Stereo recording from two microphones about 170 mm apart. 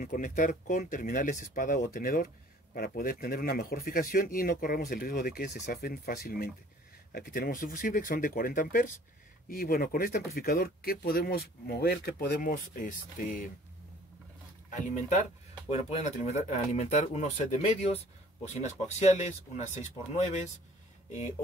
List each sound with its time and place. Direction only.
0.0 s speech: 55° left (ahead or behind)
14.7 s speech: 45° left (ahead or behind)